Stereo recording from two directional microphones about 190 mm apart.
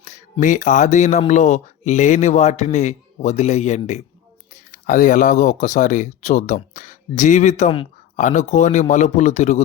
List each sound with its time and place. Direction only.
0.0 s speech: 40° left (ahead or behind)